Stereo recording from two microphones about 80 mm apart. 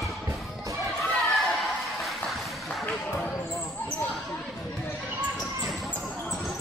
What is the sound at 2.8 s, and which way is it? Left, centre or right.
Basketball bounce, left.